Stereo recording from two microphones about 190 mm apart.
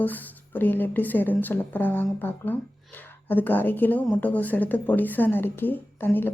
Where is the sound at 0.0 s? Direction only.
10° left (ahead or behind).